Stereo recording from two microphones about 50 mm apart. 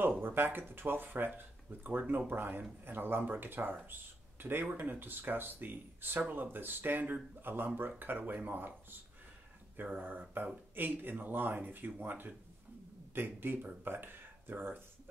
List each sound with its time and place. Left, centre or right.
0.2 s speech: right
9.8 s speech: right